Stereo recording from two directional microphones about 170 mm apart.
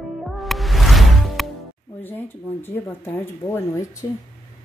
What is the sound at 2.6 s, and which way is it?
Speech, 15° left (ahead or behind).